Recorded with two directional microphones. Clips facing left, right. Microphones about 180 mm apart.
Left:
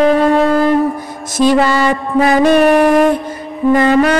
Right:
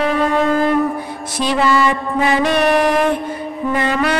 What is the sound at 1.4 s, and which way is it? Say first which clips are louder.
Music: left 5 dB; 45° left (ahead or behind).